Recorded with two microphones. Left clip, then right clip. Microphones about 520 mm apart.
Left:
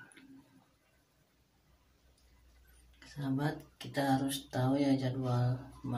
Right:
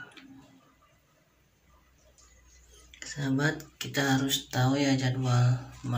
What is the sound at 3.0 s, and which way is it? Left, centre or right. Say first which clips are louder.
Speech: right 7 dB; left.